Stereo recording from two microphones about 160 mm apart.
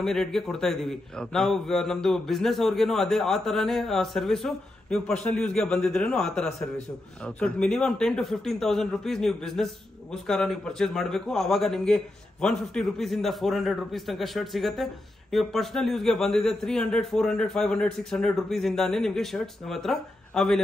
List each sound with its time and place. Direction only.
0.0 s a man's voice: 5° left (ahead or behind)